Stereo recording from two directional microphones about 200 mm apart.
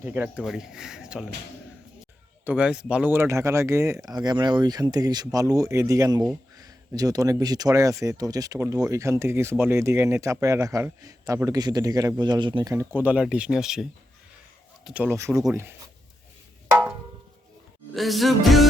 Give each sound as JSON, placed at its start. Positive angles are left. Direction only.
{"t": 0.0, "sound": "speech", "side_deg": -10}
{"t": 2.4, "sound": "speech", "side_deg": -5}
{"t": 14.8, "sound": "speech", "side_deg": -5}
{"t": 17.9, "sound": "speech", "side_deg": 0}